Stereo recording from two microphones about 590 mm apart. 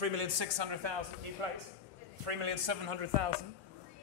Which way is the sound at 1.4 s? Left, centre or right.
Right.